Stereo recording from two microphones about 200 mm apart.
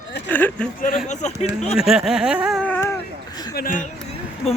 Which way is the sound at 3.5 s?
45° left (ahead or behind).